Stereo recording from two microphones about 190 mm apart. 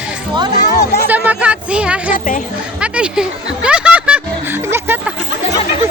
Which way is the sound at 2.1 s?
45° left (ahead or behind).